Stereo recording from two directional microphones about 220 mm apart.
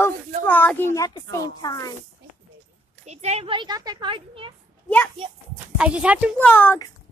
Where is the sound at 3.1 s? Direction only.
30° right (ahead or behind).